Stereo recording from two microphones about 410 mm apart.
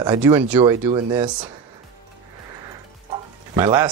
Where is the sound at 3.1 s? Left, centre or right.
Centre.